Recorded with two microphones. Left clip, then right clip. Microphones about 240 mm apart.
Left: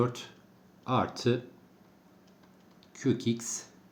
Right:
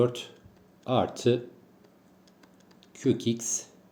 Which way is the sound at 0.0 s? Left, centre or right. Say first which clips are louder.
Right 5 dB; centre.